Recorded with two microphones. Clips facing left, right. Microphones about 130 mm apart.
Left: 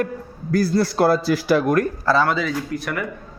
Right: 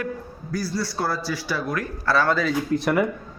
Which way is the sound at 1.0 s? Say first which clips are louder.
Left 10 dB; 70° left (ahead or behind).